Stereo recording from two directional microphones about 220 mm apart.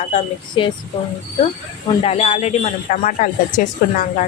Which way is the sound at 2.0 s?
30° left (ahead or behind).